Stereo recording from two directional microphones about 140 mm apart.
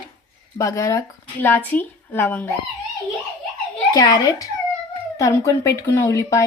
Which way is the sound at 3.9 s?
30° left (ahead or behind).